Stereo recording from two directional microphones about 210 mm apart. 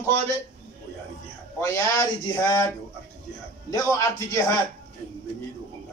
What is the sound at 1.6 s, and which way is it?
A man's voice, 15° left (ahead or behind).